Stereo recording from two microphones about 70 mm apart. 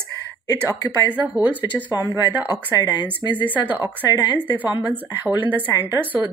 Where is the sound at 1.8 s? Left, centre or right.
Right.